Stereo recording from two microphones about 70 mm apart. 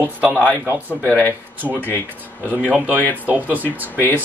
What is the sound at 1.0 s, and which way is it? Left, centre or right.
Speech, left.